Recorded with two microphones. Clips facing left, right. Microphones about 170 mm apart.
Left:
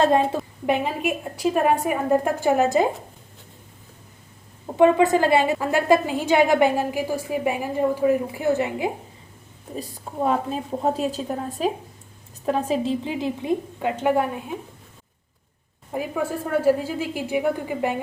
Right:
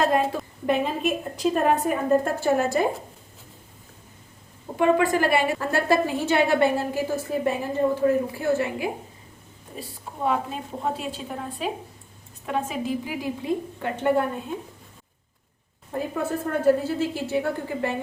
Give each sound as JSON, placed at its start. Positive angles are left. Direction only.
{"t": 0.7, "sound": "a woman's voice", "side_deg": 10}
{"t": 4.8, "sound": "a woman's voice", "side_deg": 20}
{"t": 10.2, "sound": "a woman's voice", "side_deg": 40}
{"t": 15.9, "sound": "a woman's voice", "side_deg": 10}